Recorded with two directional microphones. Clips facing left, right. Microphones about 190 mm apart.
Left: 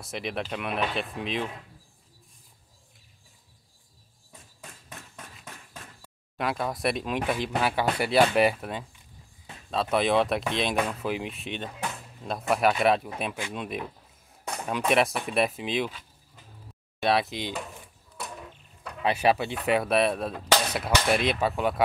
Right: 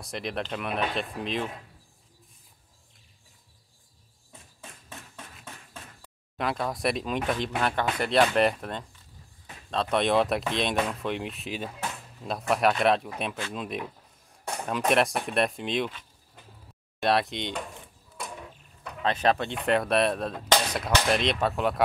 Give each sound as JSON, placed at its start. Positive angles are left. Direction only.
{"t": 0.0, "sound": "speech", "side_deg": 0}
{"t": 4.6, "sound": "a sound", "side_deg": -30}
{"t": 6.3, "sound": "speech", "side_deg": 0}
{"t": 17.0, "sound": "speech", "side_deg": 0}
{"t": 18.2, "sound": "a sound", "side_deg": 0}
{"t": 19.0, "sound": "speech", "side_deg": 10}